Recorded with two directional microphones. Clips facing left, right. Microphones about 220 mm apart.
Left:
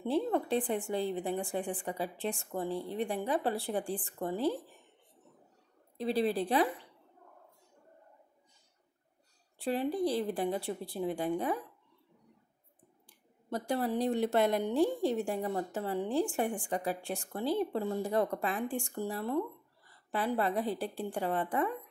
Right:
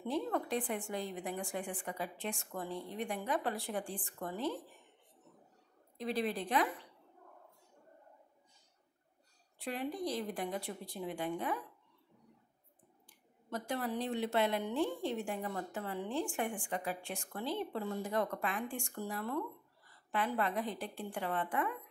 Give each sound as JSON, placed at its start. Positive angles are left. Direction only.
{"t": 0.0, "sound": "a woman's voice", "side_deg": 30}
{"t": 5.9, "sound": "a woman's voice", "side_deg": 30}
{"t": 9.6, "sound": "a woman's voice", "side_deg": 30}
{"t": 13.5, "sound": "a woman's voice", "side_deg": 35}